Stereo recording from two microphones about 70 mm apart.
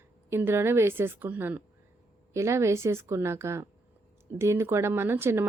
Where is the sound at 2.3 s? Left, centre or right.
Right.